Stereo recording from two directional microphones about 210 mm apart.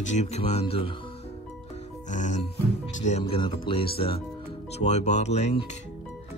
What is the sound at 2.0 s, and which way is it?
Music, 35° left (ahead or behind).